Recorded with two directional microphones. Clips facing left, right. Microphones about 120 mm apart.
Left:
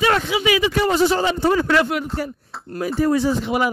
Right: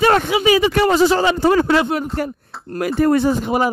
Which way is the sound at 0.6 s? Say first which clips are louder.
Right 3 dB; 65° right (ahead or behind).